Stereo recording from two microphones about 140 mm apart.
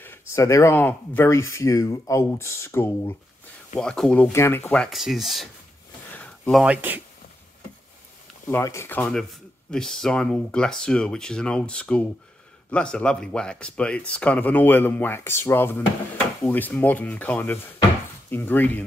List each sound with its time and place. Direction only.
0.3 s speech: 20° left (ahead or behind)
3.7 s speech: 5° left (ahead or behind)
4.8 s speech: centre (ahead or behind)
6.1 s a sound: 10° left (ahead or behind)
6.6 s speech: 10° right (ahead or behind)
8.5 s speech: 20° left (ahead or behind)